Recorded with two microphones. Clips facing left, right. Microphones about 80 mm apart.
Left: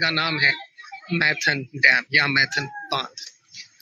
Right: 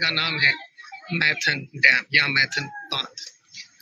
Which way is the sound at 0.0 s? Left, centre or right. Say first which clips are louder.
Left 2 dB; left.